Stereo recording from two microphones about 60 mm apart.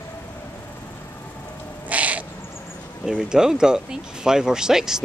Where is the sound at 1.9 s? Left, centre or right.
Right.